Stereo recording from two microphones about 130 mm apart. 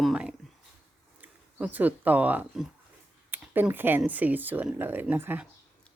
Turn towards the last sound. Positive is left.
turn(degrees=-15)  # may be behind; listen again after turning